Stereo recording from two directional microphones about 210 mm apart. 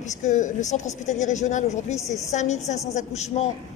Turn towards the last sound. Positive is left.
turn(degrees=30)  # may be behind; listen again after turning